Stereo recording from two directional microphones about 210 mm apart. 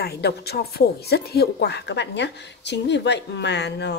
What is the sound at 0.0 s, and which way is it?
Speech, 50° left (ahead or behind).